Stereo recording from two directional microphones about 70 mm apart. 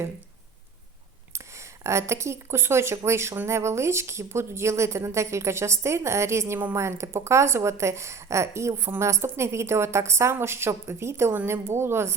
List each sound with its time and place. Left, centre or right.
1.3 s a woman's voice: right